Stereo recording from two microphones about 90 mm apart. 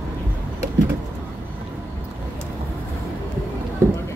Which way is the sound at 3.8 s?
30° right (ahead or behind).